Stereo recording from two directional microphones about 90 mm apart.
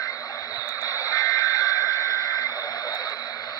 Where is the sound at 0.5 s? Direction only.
40° left (ahead or behind).